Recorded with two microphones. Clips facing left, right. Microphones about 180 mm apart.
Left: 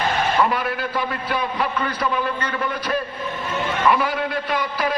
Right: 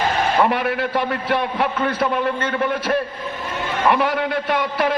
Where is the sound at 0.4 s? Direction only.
60° right (ahead or behind).